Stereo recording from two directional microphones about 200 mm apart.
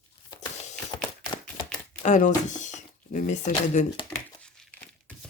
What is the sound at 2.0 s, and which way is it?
Speech, 35° left (ahead or behind).